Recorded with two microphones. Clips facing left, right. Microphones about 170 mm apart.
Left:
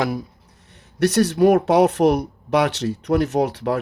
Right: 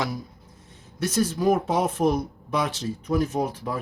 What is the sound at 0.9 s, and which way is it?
Speech, 70° left (ahead or behind).